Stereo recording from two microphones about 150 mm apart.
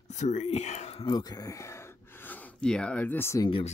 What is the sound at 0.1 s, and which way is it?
Speech, 50° left (ahead or behind).